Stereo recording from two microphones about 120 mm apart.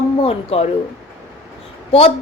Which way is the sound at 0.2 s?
55° left (ahead or behind).